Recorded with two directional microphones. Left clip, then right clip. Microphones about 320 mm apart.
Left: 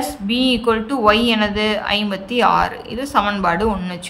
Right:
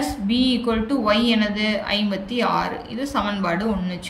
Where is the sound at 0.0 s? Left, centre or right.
Centre.